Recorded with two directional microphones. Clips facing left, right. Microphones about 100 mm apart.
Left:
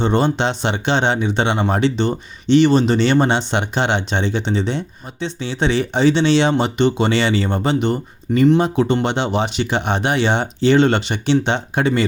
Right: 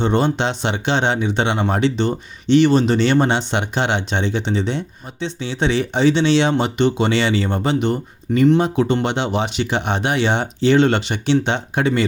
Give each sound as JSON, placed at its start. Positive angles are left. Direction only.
{"t": 0.0, "sound": "speech", "side_deg": 35}